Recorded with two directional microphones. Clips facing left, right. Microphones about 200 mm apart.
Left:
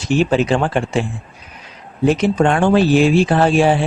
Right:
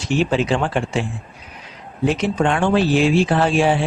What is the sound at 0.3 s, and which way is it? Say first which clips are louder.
Speech: left 3 dB; 45° left (ahead or behind).